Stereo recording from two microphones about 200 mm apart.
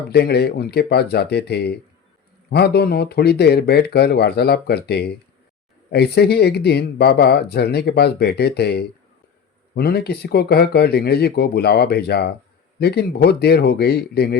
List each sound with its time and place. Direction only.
0.1 s speech: 55° left (ahead or behind)